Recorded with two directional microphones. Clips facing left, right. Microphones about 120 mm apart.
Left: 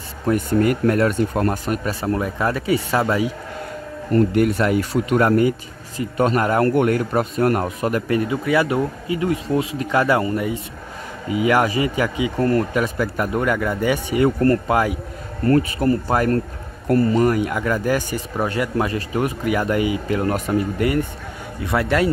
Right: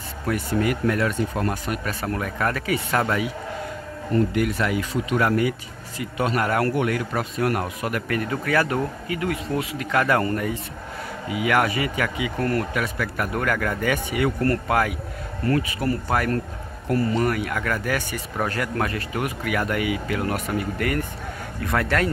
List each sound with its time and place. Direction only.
0.3 s speech: 45° left (ahead or behind)
1.9 s speech: 25° left (ahead or behind)
4.1 s speech: 45° left (ahead or behind); by 10.6 s 15° left (ahead or behind)
11.2 s speech: 30° left (ahead or behind)
17.8 s speech: 35° left (ahead or behind)
18.4 s speech: 20° left (ahead or behind)